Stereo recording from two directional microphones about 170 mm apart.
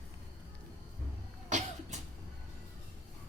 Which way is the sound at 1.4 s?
45° right (ahead or behind).